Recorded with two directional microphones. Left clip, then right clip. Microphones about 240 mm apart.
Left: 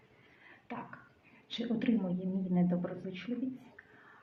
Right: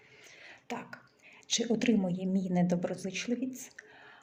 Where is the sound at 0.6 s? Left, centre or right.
Right.